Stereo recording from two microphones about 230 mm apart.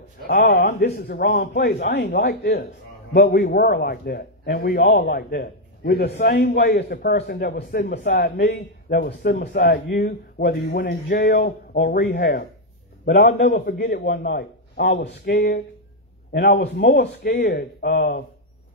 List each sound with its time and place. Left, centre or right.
0.3 s a man's voice: left